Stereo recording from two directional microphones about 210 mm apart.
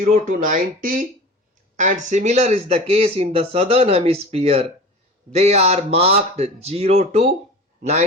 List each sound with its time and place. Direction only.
0.0 s speech: 40° right (ahead or behind)